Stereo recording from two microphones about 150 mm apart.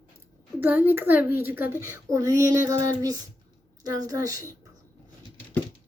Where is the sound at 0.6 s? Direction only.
10° right (ahead or behind).